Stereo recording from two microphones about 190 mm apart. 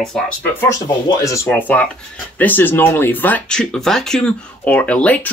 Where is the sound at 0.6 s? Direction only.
15° left (ahead or behind).